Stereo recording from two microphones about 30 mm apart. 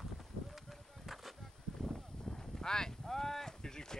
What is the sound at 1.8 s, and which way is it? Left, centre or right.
Clip-clop, centre.